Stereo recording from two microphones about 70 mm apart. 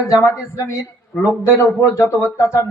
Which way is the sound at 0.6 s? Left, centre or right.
Left.